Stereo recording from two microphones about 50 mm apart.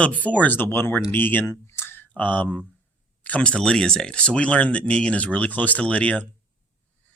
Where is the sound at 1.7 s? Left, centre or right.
Left.